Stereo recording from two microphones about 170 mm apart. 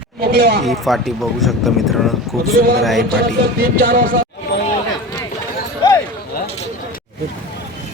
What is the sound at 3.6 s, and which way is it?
Speech, 60° right (ahead or behind).